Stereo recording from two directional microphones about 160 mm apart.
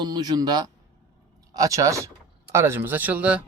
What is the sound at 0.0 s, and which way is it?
A man's voice, 25° right (ahead or behind).